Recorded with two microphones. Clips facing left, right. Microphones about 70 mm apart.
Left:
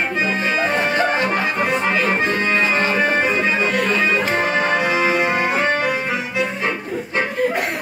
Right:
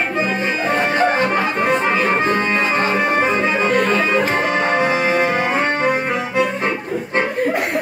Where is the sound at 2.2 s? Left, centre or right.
Right.